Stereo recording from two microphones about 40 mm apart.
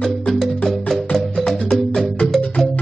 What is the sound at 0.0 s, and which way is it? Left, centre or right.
Music, centre.